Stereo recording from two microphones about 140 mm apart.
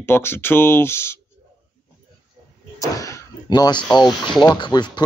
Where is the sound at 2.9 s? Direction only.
25° left (ahead or behind).